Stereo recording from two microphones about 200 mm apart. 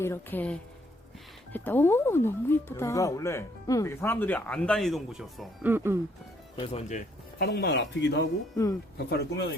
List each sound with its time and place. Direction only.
0.0 s speech: 10° left (ahead or behind); by 6.0 s 10° right (ahead or behind)
6.6 s speech: 35° left (ahead or behind)
7.3 s speech: 55° left (ahead or behind)